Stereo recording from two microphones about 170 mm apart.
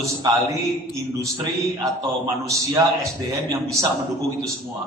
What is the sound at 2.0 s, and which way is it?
A man's voice, 20° right (ahead or behind).